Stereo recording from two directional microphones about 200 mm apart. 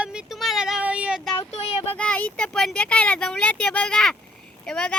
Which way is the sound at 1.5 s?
30° left (ahead or behind).